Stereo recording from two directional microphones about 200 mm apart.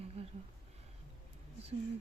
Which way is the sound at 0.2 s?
30° right (ahead or behind).